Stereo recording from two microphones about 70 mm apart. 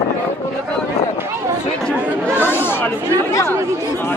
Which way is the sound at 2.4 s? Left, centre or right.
Left.